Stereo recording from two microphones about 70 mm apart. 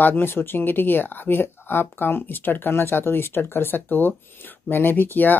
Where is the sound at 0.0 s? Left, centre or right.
Left.